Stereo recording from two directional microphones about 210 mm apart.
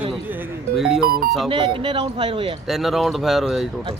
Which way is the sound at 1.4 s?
25° right (ahead or behind).